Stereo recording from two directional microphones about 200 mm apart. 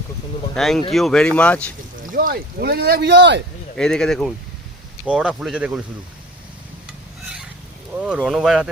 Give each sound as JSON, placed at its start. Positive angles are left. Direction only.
{"t": 0.5, "sound": "speech", "side_deg": 0}
{"t": 2.0, "sound": "speech", "side_deg": -45}
{"t": 3.8, "sound": "speech", "side_deg": 5}
{"t": 7.9, "sound": "speech", "side_deg": -5}